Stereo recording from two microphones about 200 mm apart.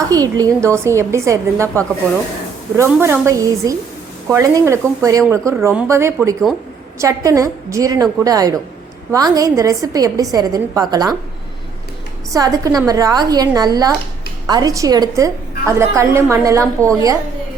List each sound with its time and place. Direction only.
0.1 s a woman's voice: 20° right (ahead or behind)
12.3 s a woman's voice: 15° right (ahead or behind)